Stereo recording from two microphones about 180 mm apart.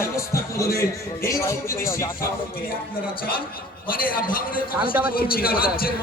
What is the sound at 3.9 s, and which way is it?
A man's voice, 50° left (ahead or behind).